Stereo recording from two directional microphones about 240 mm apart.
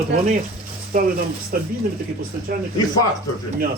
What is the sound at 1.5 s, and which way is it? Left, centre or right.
Speech, right.